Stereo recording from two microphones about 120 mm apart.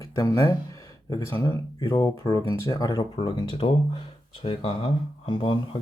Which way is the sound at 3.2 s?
45° left (ahead or behind).